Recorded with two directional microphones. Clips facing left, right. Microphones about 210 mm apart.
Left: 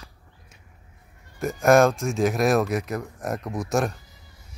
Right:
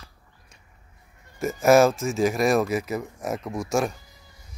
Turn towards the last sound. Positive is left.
turn(degrees=0)  # may be behind; listen again after turning